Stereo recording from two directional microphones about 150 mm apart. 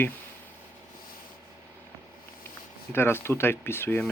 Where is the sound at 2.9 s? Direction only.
15° left (ahead or behind).